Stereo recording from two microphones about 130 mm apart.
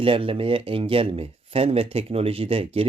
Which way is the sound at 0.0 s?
45° right (ahead or behind).